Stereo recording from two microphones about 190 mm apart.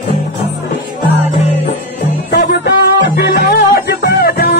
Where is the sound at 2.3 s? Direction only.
60° left (ahead or behind).